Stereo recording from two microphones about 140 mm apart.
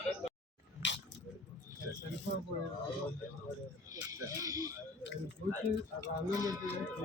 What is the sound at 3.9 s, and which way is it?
Speech, 25° right (ahead or behind).